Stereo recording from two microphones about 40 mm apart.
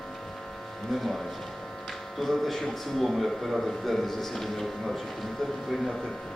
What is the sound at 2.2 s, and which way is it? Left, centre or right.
Speech, centre.